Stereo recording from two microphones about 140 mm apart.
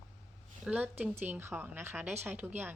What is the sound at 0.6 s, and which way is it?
A woman's voice, 10° right (ahead or behind).